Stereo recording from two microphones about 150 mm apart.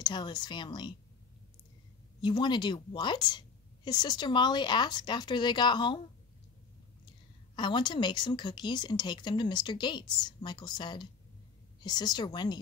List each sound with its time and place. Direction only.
0.0 s a woman's voice: 30° left (ahead or behind)
2.2 s a woman's voice: 30° left (ahead or behind)
7.5 s a woman's voice: 30° left (ahead or behind)